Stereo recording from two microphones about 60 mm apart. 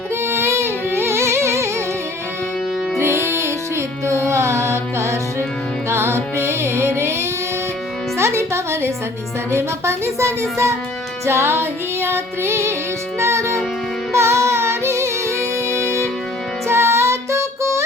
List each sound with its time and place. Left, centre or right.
0.3 s music: right
3.0 s music: right
9.5 s speech: right
11.3 s music: right
15.7 s music: left
16.6 s music: right